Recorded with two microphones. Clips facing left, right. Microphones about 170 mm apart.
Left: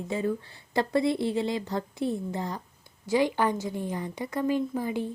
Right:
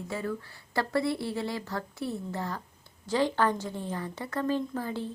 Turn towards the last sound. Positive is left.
turn(degrees=15)  # may be behind; listen again after turning